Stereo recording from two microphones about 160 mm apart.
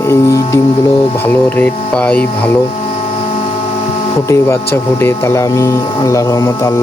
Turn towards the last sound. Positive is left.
turn(degrees=20)  # may be behind; listen again after turning